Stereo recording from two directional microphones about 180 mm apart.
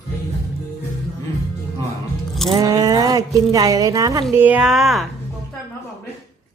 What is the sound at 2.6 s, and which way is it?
Speech, 20° right (ahead or behind).